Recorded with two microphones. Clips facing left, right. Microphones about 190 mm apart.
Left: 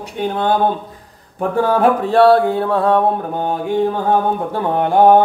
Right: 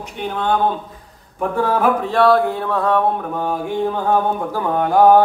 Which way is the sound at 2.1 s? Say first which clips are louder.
Left 4 dB; 30° left (ahead or behind).